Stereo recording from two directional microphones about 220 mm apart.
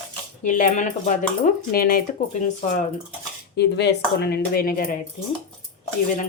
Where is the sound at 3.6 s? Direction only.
50° left (ahead or behind).